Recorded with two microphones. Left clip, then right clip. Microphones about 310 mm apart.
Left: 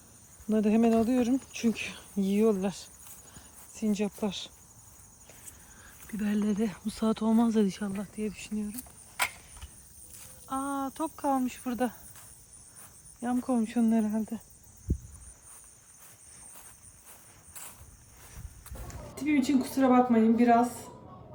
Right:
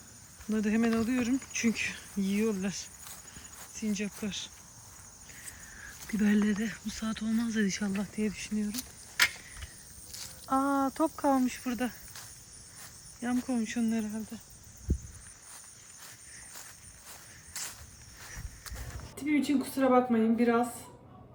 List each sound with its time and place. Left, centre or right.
0.5 s speech: centre
3.8 s speech: centre
6.0 s speech: centre
6.6 s speech: centre
7.3 s speech: left
7.5 s speech: centre
10.2 s speech: centre
13.2 s speech: centre
17.5 s a sound: centre
19.1 s speech: centre